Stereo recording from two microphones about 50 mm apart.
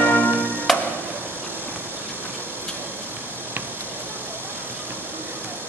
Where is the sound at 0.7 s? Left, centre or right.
Centre.